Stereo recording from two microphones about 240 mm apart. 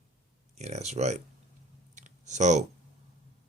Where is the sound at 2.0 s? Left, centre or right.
Right.